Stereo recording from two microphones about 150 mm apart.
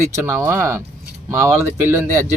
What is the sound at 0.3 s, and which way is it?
Speech, 15° right (ahead or behind).